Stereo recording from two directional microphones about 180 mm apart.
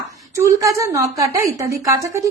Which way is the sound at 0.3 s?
15° right (ahead or behind).